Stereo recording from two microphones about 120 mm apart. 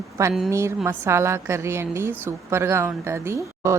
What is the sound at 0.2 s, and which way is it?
A woman's voice, 25° right (ahead or behind).